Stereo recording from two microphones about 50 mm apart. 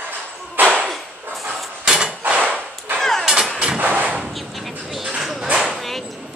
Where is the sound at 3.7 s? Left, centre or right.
Right.